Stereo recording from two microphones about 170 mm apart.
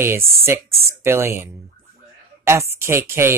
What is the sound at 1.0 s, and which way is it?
Speech, 15° right (ahead or behind).